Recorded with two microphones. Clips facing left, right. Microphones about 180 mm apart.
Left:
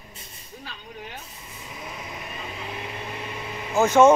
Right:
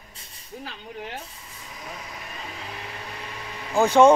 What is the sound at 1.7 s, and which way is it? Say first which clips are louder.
Vehicle: left 2 dB; 20° left (ahead or behind).